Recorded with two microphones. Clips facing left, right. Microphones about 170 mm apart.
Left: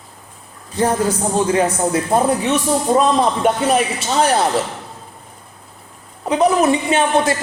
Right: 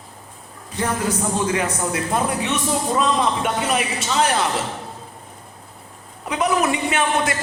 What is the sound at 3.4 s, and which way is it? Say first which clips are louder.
A man's voice: left 6 dB; 35° left (ahead or behind).